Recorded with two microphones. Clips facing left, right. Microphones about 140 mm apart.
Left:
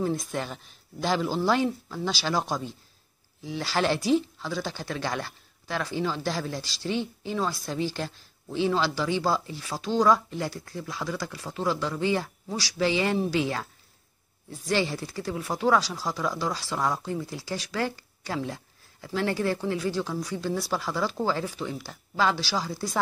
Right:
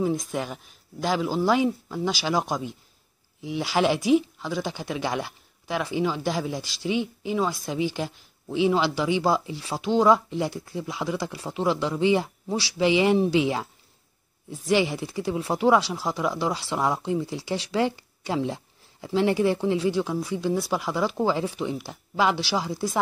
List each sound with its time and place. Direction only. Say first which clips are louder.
0.3 s speech: right 2 dB; 10° right (ahead or behind)
14.7 s speech: right 4 dB; 15° right (ahead or behind)